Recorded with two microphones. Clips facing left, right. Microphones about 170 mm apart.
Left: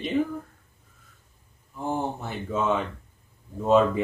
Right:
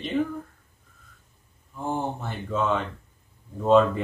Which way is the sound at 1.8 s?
5° left (ahead or behind).